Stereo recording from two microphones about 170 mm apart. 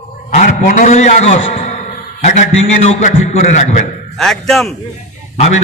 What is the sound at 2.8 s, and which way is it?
Speech, 40° left (ahead or behind).